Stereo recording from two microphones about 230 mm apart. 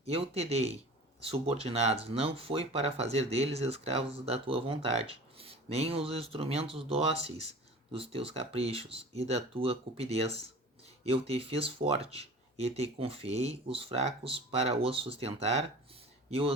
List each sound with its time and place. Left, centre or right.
0.0 s speech: right